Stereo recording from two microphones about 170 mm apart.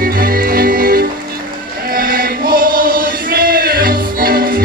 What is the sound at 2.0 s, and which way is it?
Chant, 60° right (ahead or behind).